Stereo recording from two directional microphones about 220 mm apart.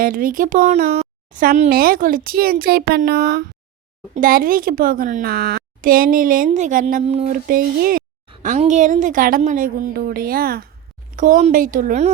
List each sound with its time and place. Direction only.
0.0 s speech: 40° right (ahead or behind)